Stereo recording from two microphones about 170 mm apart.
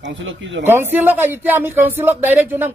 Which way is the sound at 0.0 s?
90° right.